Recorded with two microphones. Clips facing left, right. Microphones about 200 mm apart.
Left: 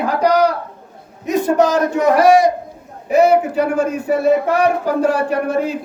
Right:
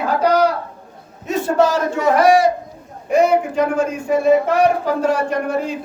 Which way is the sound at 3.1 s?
5° left (ahead or behind).